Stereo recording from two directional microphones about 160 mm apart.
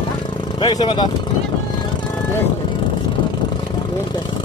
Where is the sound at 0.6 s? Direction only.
30° left (ahead or behind).